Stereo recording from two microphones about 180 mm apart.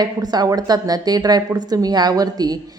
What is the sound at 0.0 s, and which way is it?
A woman's voice, 20° right (ahead or behind).